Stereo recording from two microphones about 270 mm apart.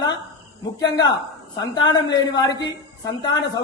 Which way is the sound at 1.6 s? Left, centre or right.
Centre.